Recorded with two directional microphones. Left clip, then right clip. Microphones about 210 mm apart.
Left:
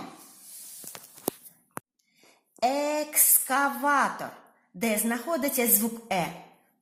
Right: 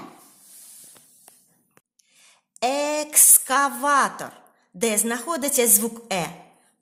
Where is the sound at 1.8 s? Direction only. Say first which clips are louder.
Left 19 dB; 45° left (ahead or behind).